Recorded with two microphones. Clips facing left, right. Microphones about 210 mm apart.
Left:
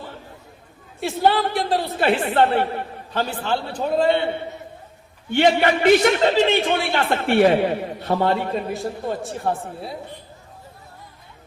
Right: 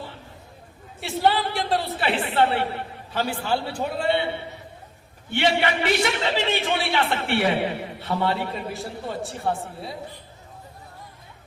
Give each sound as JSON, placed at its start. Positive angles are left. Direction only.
{"t": 0.9, "sound": "speech", "side_deg": 0}
{"t": 2.0, "sound": "a man's voice", "side_deg": 45}
{"t": 3.2, "sound": "a man's voice", "side_deg": -10}
{"t": 3.9, "sound": "a man's voice", "side_deg": 40}
{"t": 5.3, "sound": "a man's voice", "side_deg": 45}
{"t": 8.7, "sound": "speech", "side_deg": 0}